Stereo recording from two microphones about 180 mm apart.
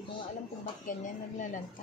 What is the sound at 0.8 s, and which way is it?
Speech, 45° left (ahead or behind).